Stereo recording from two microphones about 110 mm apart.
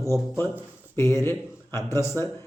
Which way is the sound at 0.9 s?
25° left (ahead or behind).